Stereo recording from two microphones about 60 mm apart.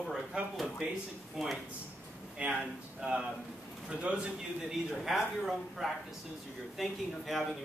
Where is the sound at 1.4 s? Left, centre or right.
Centre.